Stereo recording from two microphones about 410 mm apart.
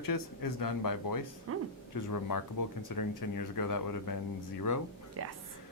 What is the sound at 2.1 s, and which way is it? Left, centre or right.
Speech, left.